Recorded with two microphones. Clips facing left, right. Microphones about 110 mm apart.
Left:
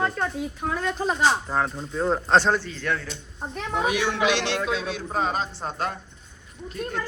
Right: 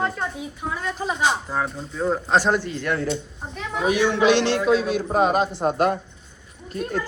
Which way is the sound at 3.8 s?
35° right (ahead or behind).